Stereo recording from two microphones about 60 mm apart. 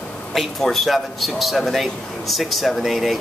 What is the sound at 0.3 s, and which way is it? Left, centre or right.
Speech, centre.